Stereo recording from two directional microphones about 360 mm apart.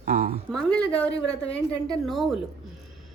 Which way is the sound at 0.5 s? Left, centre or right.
Centre.